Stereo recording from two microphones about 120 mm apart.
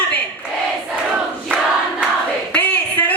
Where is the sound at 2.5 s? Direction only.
10° left (ahead or behind).